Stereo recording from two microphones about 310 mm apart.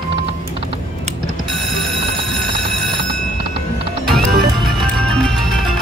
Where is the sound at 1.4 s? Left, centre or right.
Centre.